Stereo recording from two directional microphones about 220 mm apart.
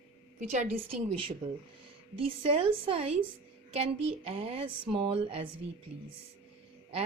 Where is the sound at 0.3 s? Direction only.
35° right (ahead or behind).